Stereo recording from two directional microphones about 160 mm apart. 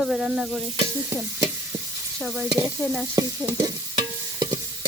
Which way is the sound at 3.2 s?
25° right (ahead or behind).